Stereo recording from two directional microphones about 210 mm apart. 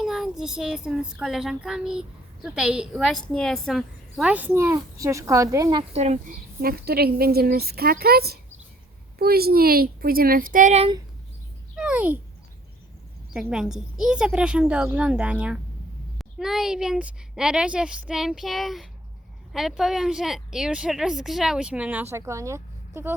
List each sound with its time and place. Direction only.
0.0 s child singing: centre (ahead or behind)
5.9 s speech: 30° right (ahead or behind)
6.6 s a woman's voice: 45° right (ahead or behind)
11.8 s speech: 5° right (ahead or behind)
13.5 s child singing: centre (ahead or behind)